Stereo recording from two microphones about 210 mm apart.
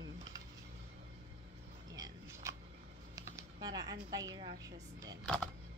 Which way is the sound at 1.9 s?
15° right (ahead or behind).